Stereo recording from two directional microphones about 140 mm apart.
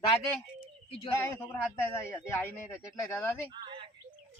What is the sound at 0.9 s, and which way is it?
Speech, 45° left (ahead or behind).